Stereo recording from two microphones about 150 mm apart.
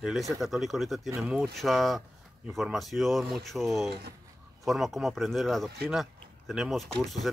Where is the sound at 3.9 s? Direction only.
90° right.